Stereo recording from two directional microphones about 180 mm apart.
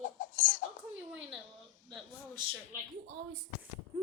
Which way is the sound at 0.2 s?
45° left (ahead or behind).